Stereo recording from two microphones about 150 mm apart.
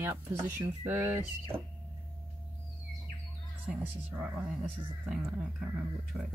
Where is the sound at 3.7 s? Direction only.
10° right (ahead or behind).